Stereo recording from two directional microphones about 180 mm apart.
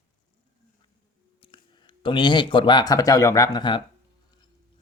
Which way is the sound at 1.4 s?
30° left (ahead or behind).